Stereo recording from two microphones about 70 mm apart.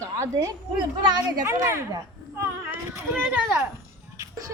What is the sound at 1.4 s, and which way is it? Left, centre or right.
Speech, right.